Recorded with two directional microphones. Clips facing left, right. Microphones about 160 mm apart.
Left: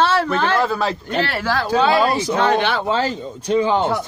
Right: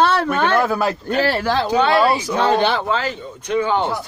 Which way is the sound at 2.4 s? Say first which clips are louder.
Right 2 dB; 30° right (ahead or behind).